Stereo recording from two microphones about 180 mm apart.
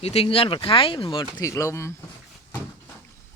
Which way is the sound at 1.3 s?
15° left (ahead or behind).